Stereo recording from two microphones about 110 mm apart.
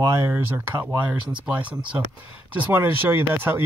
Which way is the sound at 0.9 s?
15° right (ahead or behind).